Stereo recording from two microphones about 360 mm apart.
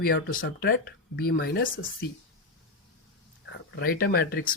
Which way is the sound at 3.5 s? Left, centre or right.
Left.